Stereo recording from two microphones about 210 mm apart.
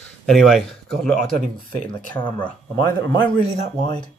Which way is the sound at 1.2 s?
40° right (ahead or behind).